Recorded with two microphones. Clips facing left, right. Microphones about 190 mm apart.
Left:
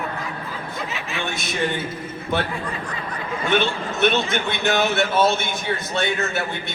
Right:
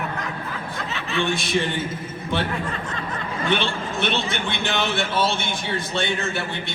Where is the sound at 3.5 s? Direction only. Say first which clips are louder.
Left 3 dB; 50° left (ahead or behind).